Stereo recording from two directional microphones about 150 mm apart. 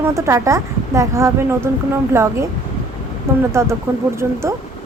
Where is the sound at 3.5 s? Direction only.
20° right (ahead or behind).